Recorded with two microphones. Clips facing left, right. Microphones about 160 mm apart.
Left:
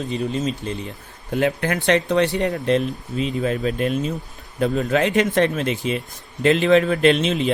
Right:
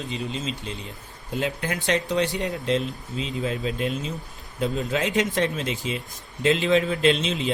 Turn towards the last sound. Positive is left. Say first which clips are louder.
# left 5 dB
turn(degrees=60)  # may be behind; listen again after turning